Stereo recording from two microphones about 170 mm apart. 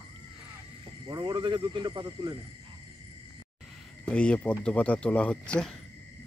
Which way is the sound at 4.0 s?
5° left (ahead or behind).